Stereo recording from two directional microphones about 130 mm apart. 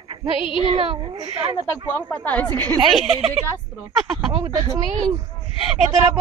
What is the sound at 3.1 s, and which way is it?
Speech, 55° right (ahead or behind).